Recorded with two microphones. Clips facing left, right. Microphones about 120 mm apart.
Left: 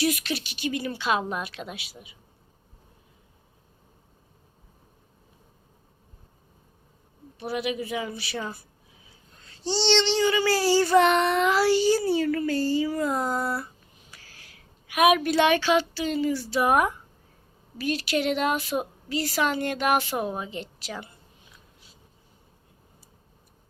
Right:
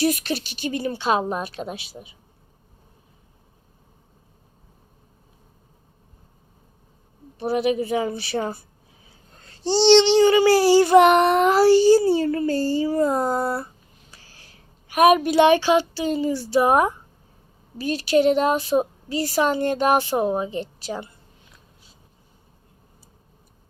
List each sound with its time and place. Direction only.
0.0 s speech: 40° right (ahead or behind)
7.3 s speech: 35° right (ahead or behind)
9.4 s child singing: 40° right (ahead or behind); by 11.1 s 20° right (ahead or behind)
11.1 s speech: 50° right (ahead or behind)
14.1 s a sound: 30° right (ahead or behind)
15.4 s child singing: 30° right (ahead or behind)
17.7 s speech: 30° right (ahead or behind)